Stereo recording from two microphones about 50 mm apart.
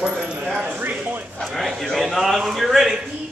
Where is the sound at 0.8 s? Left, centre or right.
Right.